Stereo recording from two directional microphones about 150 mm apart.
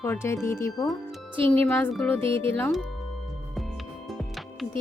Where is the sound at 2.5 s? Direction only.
10° left (ahead or behind).